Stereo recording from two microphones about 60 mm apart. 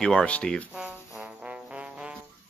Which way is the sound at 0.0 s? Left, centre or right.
Centre.